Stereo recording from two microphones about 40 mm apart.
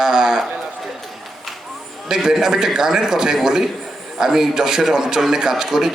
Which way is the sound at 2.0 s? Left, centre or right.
Centre.